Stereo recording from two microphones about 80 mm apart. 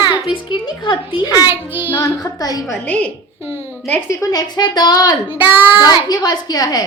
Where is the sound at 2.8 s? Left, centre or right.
Centre.